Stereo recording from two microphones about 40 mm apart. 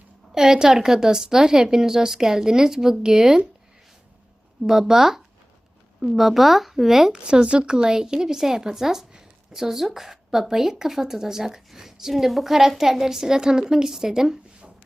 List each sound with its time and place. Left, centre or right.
0.3 s a woman's voice: centre
4.6 s a woman's voice: centre
7.1 s a woman's voice: right
9.1 s a sound: centre
10.5 s a woman's voice: centre